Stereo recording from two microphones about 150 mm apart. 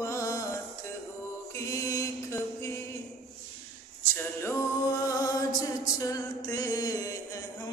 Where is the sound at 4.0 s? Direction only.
20° left (ahead or behind).